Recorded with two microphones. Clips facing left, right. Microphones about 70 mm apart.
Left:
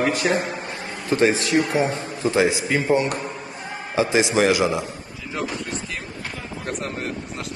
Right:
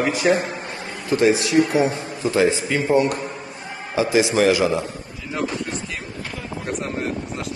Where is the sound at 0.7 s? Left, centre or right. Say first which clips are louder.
Right 1 dB; left.